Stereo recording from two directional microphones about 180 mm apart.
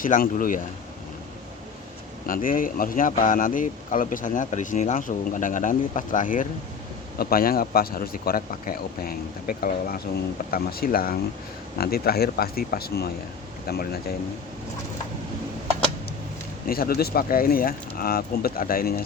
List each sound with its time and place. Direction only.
0.0 s speech: 50° left (ahead or behind)
2.2 s speech: 50° left (ahead or behind)
16.6 s speech: 55° left (ahead or behind)